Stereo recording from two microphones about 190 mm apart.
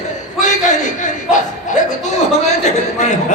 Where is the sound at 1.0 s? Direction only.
40° left (ahead or behind).